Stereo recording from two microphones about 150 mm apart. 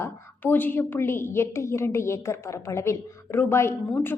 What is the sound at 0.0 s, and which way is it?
A woman's voice, 10° left (ahead or behind).